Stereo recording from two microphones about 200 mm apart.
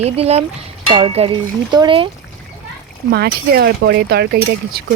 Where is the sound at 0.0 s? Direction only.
30° right (ahead or behind).